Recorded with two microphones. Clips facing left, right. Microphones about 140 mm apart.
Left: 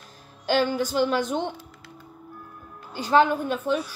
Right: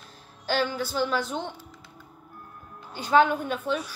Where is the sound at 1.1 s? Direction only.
45° left (ahead or behind).